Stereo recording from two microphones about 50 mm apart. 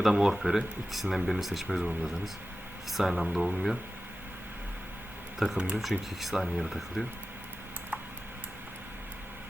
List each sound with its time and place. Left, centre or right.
0.0 s speech: centre
1.6 s speech: centre
5.4 s speech: centre